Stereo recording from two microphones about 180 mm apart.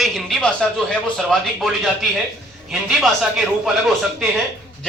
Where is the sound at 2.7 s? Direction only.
Centre (ahead or behind).